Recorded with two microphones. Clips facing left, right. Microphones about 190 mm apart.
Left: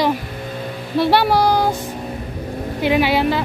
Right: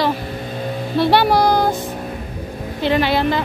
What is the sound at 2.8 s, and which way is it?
Speech, 10° left (ahead or behind).